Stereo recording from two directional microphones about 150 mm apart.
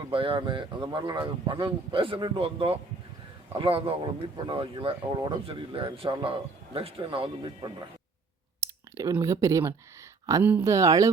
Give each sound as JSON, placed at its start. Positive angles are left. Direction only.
{"t": 0.1, "sound": "speech", "side_deg": -35}
{"t": 8.6, "sound": "speech", "side_deg": -20}